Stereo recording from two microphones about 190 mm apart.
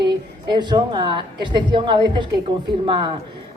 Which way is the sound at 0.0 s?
25° right (ahead or behind).